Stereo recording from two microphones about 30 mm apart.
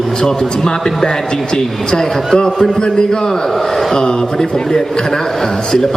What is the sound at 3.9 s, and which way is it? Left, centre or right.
Speech, left.